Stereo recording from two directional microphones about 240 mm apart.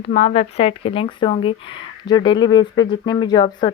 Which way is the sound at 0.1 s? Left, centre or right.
Left.